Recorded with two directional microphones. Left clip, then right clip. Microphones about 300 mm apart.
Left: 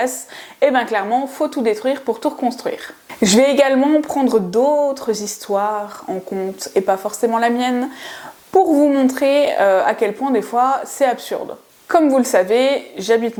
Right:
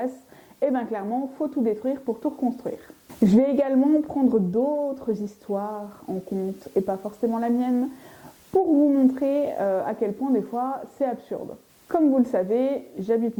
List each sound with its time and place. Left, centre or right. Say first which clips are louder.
0.6 s speech: left 10 dB; centre